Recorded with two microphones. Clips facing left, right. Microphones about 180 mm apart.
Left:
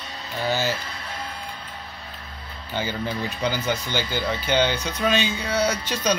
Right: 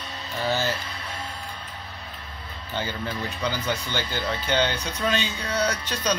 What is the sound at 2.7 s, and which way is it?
Speech, 10° left (ahead or behind).